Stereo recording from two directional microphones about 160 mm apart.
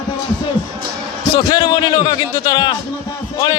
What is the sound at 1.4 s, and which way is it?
A man's voice, 25° left (ahead or behind).